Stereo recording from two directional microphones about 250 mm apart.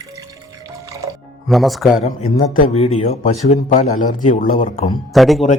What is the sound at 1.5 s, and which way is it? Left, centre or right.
Speech, centre.